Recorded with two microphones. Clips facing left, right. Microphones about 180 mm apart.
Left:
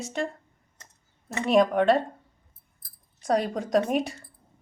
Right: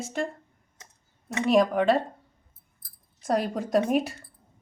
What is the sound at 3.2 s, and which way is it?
Speech, centre (ahead or behind).